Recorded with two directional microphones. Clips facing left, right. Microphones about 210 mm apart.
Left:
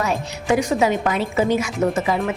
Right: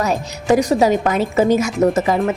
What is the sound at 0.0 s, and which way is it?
A woman's voice, 40° right (ahead or behind).